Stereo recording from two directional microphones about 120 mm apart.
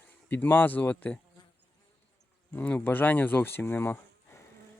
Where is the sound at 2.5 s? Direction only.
15° left (ahead or behind).